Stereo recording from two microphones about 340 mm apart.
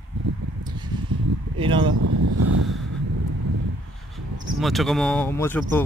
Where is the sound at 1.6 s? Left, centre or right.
Centre.